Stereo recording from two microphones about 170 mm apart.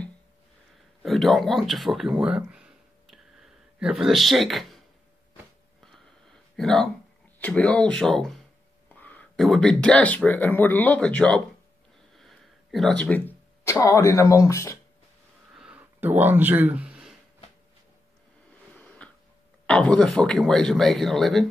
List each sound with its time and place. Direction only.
1.0 s speech: centre (ahead or behind)
6.5 s speech: 5° left (ahead or behind)
12.2 s a sound: centre (ahead or behind)
13.0 s speech: 10° left (ahead or behind)
15.5 s a sound: 5° right (ahead or behind)
19.6 s speech: 5° left (ahead or behind)